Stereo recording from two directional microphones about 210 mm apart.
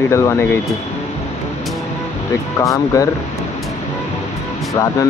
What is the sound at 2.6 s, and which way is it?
Speech, 15° left (ahead or behind).